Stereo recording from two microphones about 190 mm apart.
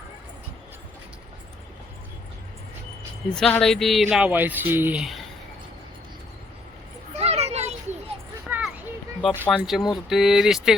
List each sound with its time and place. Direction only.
3.3 s speech: 5° left (ahead or behind)
7.2 s children playing: 35° right (ahead or behind)
8.4 s a sound: 10° right (ahead or behind)
9.3 s speech: 10° right (ahead or behind)